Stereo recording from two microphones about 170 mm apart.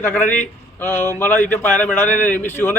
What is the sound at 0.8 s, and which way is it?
Speech, 10° left (ahead or behind).